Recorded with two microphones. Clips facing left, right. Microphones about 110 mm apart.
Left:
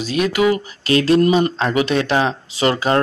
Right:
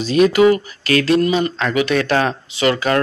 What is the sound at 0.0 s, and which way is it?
Speech, 5° left (ahead or behind).